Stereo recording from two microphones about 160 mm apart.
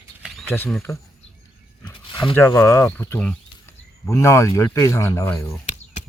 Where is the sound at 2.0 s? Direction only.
30° left (ahead or behind).